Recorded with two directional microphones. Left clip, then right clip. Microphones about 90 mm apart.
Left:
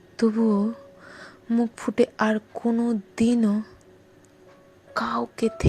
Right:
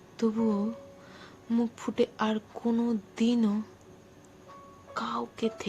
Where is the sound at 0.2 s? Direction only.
90° left.